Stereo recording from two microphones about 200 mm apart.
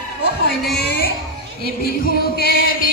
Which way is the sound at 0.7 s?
50° left (ahead or behind).